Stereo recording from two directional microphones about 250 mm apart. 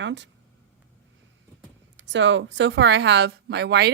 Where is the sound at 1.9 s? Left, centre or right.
Right.